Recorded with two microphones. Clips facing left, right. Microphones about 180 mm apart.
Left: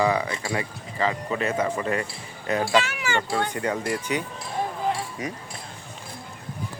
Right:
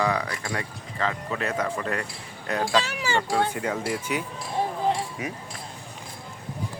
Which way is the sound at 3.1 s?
Centre (ahead or behind).